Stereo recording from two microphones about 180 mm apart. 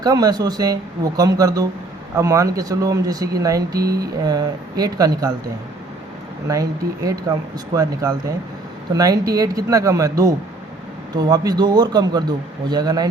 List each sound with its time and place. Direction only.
0.0 s speech: 20° right (ahead or behind)
3.8 s speech: 60° right (ahead or behind)
4.2 s speech: 20° right (ahead or behind)
6.5 s speech: 20° right (ahead or behind)